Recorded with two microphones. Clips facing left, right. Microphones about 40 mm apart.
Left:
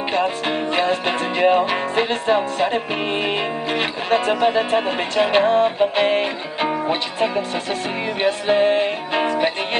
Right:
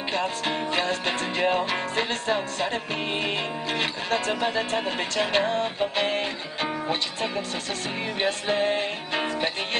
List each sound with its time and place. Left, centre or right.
0.1 s music: centre